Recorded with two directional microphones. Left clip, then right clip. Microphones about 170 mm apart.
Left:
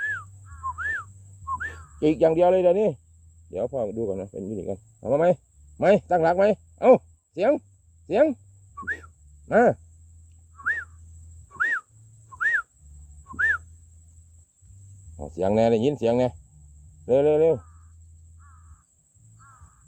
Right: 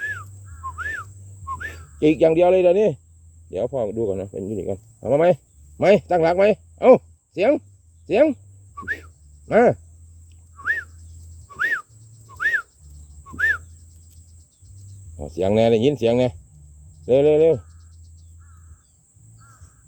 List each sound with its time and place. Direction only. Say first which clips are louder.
0.0 s dog: even; 30° right (ahead or behind)
1.5 s speech: even; 30° right (ahead or behind)
8.0 s a sound: right 4 dB; 25° right (ahead or behind)
9.5 s speech: right 3 dB; 25° right (ahead or behind)
10.6 s cricket: right 3 dB; 25° right (ahead or behind)
11.4 s wild animals: right 2 dB; 25° right (ahead or behind)
12.4 s owl: right 2 dB; 30° right (ahead or behind)
13.3 s cricket: right 2 dB; 30° right (ahead or behind)
15.2 s speech: right 3 dB; 30° right (ahead or behind)